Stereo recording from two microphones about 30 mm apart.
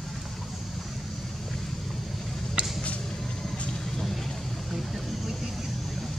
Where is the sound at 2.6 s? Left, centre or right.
Right.